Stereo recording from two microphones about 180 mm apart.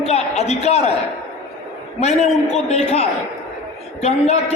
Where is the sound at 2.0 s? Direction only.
35° left (ahead or behind).